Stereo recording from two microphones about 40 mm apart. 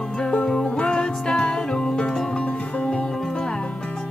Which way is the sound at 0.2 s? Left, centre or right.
Left.